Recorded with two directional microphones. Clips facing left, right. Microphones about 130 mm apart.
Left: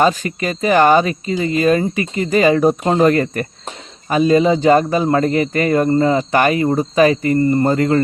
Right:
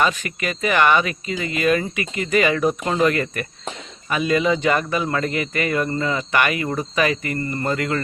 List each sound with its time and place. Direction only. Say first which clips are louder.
0.0 s speech: left 6 dB; 35° left (ahead or behind)